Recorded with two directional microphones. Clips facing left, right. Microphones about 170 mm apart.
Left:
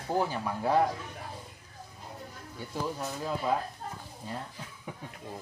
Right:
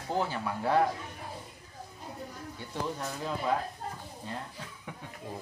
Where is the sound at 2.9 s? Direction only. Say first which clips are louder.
Left 1 dB; 10° left (ahead or behind).